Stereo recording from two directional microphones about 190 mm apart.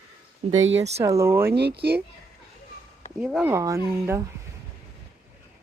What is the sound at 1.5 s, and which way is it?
Speech, 60° right (ahead or behind).